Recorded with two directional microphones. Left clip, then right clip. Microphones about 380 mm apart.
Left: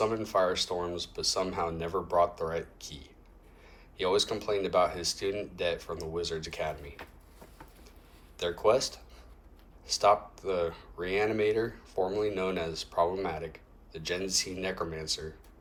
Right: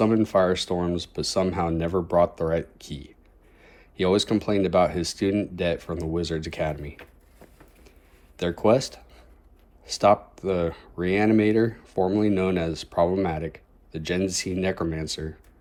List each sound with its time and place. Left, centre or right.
0.0 s speech: centre
8.4 s speech: right